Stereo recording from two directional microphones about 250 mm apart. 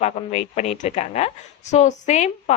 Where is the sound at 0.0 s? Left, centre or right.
Left.